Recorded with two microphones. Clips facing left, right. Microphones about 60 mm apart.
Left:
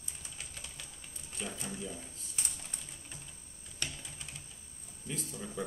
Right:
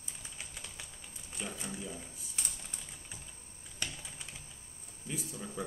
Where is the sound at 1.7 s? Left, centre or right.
Centre.